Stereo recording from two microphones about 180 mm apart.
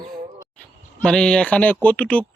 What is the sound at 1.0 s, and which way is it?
A man's voice, 5° left (ahead or behind).